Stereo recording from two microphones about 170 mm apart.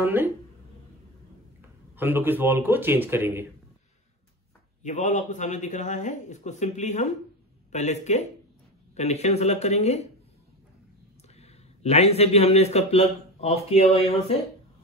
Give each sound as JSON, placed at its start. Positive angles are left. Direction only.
{"t": 0.0, "sound": "speech", "side_deg": -10}
{"t": 2.0, "sound": "speech", "side_deg": -10}
{"t": 4.8, "sound": "speech", "side_deg": 45}
{"t": 11.3, "sound": "a man's voice", "side_deg": 40}